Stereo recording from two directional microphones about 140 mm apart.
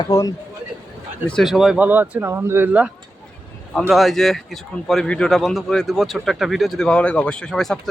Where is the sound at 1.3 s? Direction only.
Centre (ahead or behind).